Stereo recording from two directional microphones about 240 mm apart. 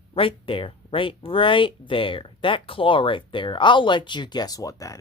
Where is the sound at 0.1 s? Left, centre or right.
Left.